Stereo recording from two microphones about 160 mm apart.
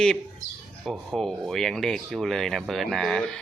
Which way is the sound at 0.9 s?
Centre (ahead or behind).